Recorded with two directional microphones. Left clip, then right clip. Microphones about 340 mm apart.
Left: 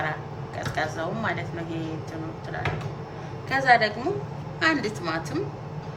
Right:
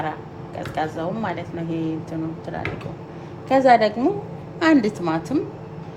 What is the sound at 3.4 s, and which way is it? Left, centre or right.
A woman's voice, centre.